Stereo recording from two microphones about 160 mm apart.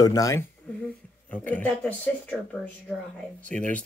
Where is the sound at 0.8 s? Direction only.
10° left (ahead or behind).